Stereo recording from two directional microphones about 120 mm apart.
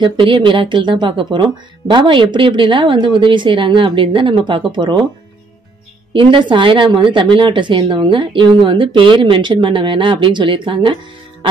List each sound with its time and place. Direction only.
0.0 s a woman's voice: 45° right (ahead or behind)
6.1 s a woman's voice: 45° right (ahead or behind)